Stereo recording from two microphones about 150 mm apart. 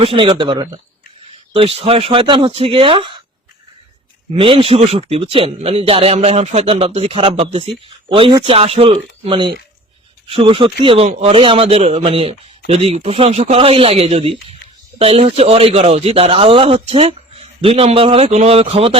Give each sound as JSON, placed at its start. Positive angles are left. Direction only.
{"t": 0.0, "sound": "speech", "side_deg": -35}
{"t": 4.4, "sound": "speech", "side_deg": -40}